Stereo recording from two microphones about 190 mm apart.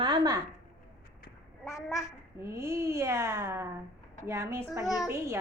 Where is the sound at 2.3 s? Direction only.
15° right (ahead or behind).